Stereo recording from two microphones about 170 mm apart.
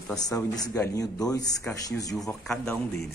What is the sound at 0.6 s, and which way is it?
Speech, 20° left (ahead or behind).